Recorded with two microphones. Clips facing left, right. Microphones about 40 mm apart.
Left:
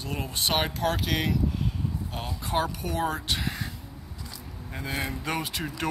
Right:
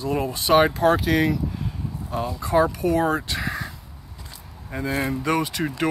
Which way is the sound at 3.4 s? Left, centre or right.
Centre.